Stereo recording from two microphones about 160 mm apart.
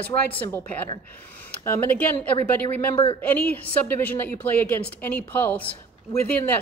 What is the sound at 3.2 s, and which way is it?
A woman's voice, 10° left (ahead or behind).